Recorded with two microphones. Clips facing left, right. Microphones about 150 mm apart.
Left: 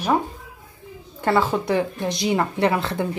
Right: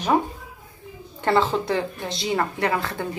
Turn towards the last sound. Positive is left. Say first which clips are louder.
# left 4 dB
turn(degrees=20)  # may be behind; listen again after turning